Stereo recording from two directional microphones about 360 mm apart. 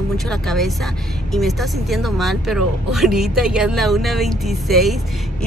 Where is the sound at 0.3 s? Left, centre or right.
Centre.